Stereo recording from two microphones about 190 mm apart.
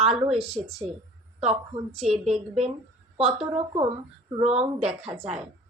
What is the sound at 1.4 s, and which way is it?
Speech, 35° right (ahead or behind).